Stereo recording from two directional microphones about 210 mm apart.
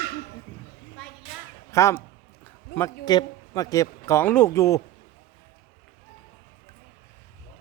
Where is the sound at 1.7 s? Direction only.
15° left (ahead or behind).